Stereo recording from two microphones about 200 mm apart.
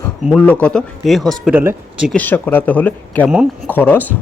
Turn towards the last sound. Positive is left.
turn(degrees=10)  # may be behind; listen again after turning